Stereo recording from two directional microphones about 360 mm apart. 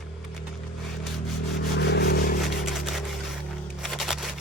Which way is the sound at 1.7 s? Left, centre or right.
Left.